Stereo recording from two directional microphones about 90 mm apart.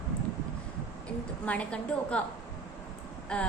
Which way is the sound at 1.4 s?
15° left (ahead or behind).